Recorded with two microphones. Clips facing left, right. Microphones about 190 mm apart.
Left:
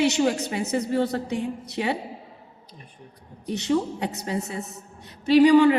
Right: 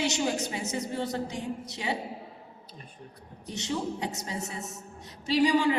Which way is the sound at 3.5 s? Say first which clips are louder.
Left 8 dB; 60° left (ahead or behind).